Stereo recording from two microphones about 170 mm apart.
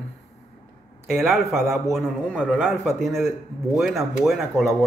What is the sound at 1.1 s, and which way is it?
A man's voice, centre (ahead or behind).